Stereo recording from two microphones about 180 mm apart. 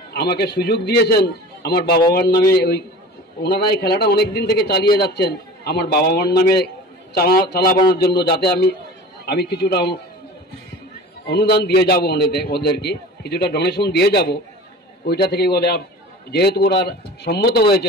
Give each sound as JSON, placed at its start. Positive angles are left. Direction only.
{"t": 0.1, "sound": "a man's voice", "side_deg": 65}
{"t": 11.2, "sound": "a man's voice", "side_deg": 65}